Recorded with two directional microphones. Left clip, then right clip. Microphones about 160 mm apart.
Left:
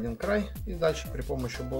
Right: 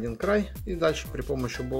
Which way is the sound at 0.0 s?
40° right (ahead or behind).